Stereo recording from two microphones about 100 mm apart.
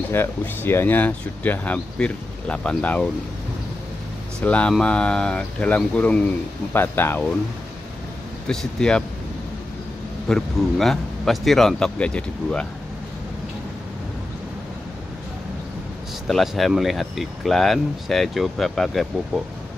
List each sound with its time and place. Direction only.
0.1 s speech: 20° left (ahead or behind)
4.4 s speech: 10° left (ahead or behind)
6.7 s speech: 20° left (ahead or behind)
8.5 s speech: 10° left (ahead or behind)
10.2 s speech: 5° left (ahead or behind)
16.3 s speech: centre (ahead or behind)